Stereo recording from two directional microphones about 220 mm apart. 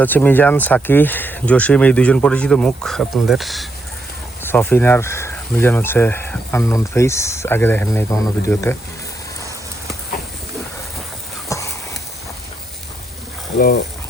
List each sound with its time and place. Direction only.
0.0 s speech: 10° left (ahead or behind)
11.4 s a sound: 15° left (ahead or behind)
13.6 s speech: 45° left (ahead or behind)